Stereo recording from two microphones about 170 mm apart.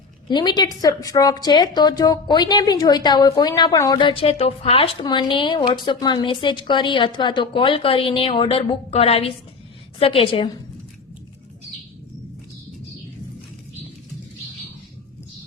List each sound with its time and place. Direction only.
0.3 s a woman's voice: 25° left (ahead or behind)